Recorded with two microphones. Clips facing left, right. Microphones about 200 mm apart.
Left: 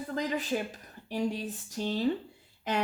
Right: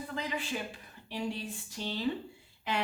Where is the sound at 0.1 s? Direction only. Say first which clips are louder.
Left 7 dB; 40° left (ahead or behind).